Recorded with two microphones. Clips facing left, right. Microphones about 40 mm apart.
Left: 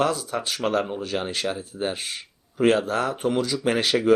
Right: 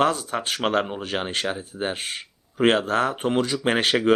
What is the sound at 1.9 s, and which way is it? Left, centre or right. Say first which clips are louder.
Speech: right 1 dB; right.